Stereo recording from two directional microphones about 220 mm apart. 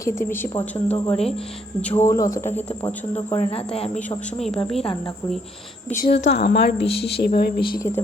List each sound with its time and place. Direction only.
0.0 s speech: 10° left (ahead or behind)
0.9 s speech: 25° left (ahead or behind)
1.8 s speech: 10° left (ahead or behind)
3.2 s speech: 25° left (ahead or behind)
4.4 s a woman's voice: centre (ahead or behind)
4.8 s speech: 25° left (ahead or behind)
6.0 s a woman's voice: 50° left (ahead or behind)